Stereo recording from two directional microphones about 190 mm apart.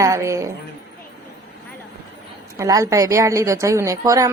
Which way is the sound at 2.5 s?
15° right (ahead or behind).